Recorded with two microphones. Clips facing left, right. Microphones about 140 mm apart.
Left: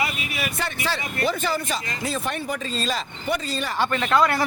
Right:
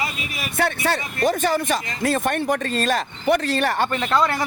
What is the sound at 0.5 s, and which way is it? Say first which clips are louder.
Speech: right 11 dB; 60° right (ahead or behind).